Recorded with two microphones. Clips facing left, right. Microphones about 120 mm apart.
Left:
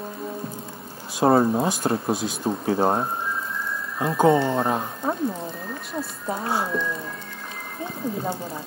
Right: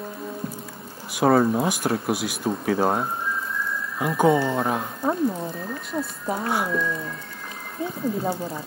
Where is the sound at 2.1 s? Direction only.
10° right (ahead or behind).